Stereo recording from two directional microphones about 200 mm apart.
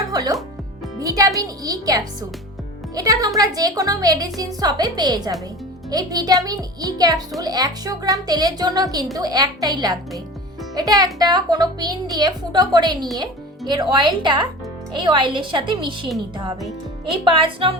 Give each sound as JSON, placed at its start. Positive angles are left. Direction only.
{"t": 0.1, "sound": "music", "side_deg": -20}
{"t": 0.9, "sound": "a child's voice", "side_deg": -15}
{"t": 17.2, "sound": "a child's voice", "side_deg": -25}